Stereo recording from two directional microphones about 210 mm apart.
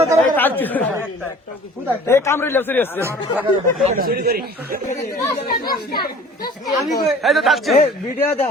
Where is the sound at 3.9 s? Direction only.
45° right (ahead or behind).